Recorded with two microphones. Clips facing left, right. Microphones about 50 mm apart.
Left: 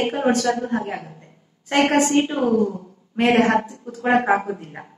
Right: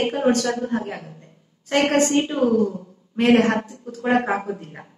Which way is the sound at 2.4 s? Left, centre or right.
Left.